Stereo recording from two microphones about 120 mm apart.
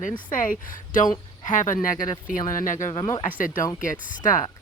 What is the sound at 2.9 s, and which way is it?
Speech, 40° left (ahead or behind).